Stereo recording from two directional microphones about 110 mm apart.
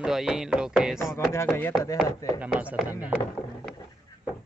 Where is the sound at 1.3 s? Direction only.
25° left (ahead or behind).